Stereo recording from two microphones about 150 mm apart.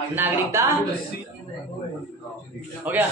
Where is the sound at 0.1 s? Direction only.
15° right (ahead or behind).